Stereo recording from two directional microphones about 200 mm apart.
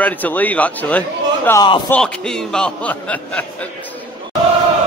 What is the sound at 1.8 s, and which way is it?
Speech, 5° left (ahead or behind).